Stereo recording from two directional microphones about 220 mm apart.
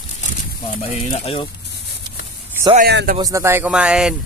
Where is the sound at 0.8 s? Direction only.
25° left (ahead or behind).